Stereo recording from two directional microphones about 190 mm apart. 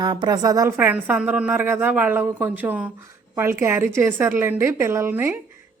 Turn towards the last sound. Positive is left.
turn(degrees=-10)  # may be behind; listen again after turning